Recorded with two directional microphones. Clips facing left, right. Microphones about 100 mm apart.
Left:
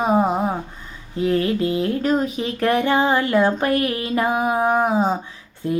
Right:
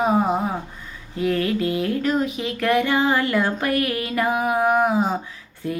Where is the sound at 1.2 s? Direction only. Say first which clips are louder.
Left 2 dB; 30° left (ahead or behind).